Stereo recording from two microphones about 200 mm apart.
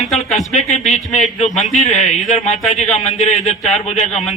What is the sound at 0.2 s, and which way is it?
Speech, 35° left (ahead or behind).